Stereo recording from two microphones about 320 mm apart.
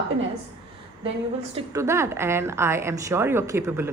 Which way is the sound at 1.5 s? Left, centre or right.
Centre.